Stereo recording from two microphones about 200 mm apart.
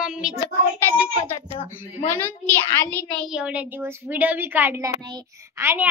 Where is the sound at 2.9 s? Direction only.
10° left (ahead or behind).